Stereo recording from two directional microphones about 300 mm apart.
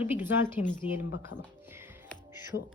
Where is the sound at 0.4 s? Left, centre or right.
Centre.